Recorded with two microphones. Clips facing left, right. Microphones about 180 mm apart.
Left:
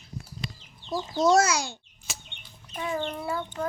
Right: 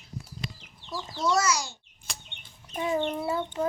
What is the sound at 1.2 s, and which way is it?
Speech, 50° left (ahead or behind).